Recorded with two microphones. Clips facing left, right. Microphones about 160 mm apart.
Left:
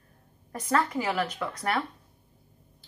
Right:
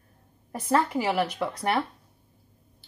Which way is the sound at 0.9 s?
5° right (ahead or behind).